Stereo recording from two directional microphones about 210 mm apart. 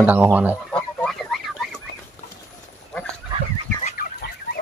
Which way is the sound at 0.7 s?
5° left (ahead or behind).